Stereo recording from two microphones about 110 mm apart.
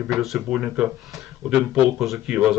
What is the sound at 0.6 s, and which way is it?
Speech, 10° right (ahead or behind).